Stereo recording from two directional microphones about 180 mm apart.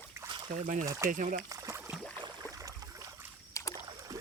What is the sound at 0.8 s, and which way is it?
Speech, 15° right (ahead or behind).